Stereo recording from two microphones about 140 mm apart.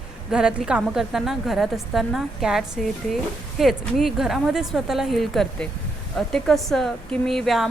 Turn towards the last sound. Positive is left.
turn(degrees=0)  # may be behind; listen again after turning